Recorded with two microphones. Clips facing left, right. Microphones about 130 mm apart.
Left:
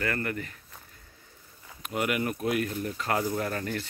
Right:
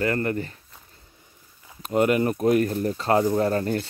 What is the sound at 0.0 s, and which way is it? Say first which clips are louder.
Speech: right 7 dB; 30° right (ahead or behind).